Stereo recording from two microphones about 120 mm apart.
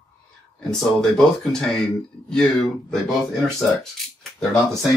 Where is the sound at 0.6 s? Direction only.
5° left (ahead or behind).